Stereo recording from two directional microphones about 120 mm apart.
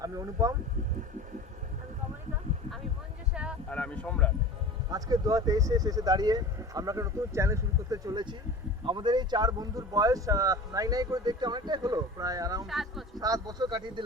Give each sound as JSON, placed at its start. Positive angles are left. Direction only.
{"t": 0.0, "sound": "speech", "side_deg": -30}
{"t": 3.7, "sound": "speech", "side_deg": 10}
{"t": 4.9, "sound": "speech", "side_deg": -30}
{"t": 12.6, "sound": "speech", "side_deg": 0}
{"t": 13.1, "sound": "speech", "side_deg": -30}